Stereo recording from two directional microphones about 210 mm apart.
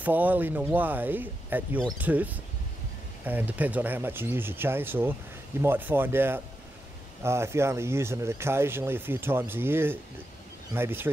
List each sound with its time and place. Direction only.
0.0 s speech: 10° right (ahead or behind)